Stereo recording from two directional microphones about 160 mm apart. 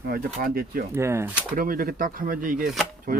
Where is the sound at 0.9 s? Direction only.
15° right (ahead or behind).